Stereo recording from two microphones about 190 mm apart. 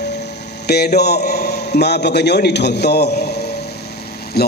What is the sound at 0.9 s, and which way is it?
A man's voice, 60° left (ahead or behind).